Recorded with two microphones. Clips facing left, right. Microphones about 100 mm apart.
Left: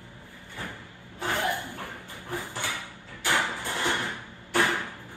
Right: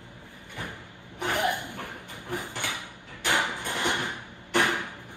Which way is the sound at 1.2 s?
15° right (ahead or behind).